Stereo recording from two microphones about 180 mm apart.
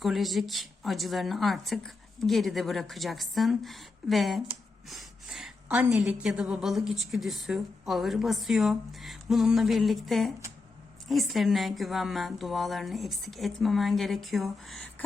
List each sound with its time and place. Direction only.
0.0 s a woman's voice: centre (ahead or behind)